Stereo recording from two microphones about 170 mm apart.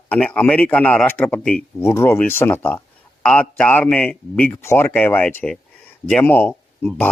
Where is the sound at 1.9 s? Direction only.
15° left (ahead or behind).